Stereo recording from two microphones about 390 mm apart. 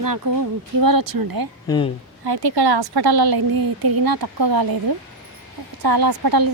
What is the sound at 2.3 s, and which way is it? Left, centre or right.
A woman's voice, right.